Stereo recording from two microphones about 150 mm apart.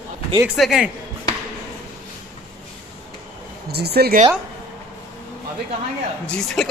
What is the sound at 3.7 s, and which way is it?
Speech, 90° right.